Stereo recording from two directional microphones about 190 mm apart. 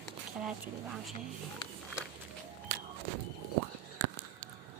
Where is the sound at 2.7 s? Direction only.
50° right (ahead or behind).